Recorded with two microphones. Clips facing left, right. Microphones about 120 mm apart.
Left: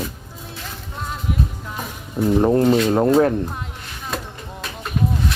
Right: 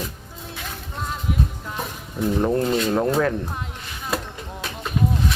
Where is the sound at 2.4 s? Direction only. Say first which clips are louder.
Left 5 dB; 30° left (ahead or behind).